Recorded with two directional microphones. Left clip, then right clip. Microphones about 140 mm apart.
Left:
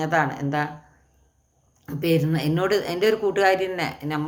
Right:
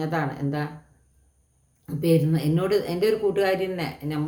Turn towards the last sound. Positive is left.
turn(degrees=-15)  # may be behind; listen again after turning